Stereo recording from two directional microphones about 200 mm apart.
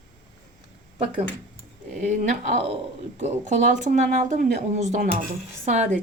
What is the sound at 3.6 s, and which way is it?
Speech, 40° right (ahead or behind).